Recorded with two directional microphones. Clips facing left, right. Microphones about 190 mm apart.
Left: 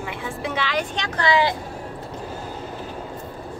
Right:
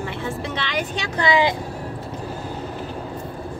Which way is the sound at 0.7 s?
10° right (ahead or behind).